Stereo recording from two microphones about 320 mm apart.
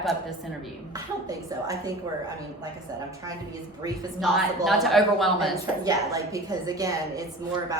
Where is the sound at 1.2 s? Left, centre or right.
Centre.